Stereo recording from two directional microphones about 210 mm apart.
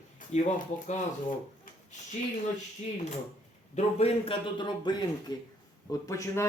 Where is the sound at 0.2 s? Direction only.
40° left (ahead or behind).